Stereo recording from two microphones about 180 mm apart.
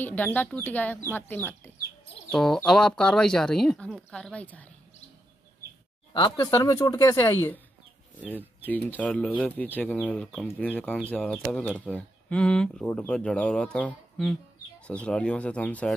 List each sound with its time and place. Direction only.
0.0 s speech: 10° left (ahead or behind)
6.1 s speech: 25° left (ahead or behind)
8.2 s speech: 10° right (ahead or behind)
8.6 s speech: 10° left (ahead or behind)